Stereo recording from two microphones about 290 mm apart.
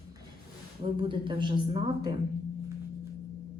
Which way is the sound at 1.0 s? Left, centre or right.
Centre.